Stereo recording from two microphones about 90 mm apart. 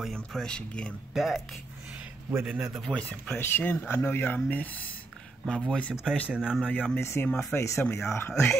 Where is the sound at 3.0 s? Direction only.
15° left (ahead or behind).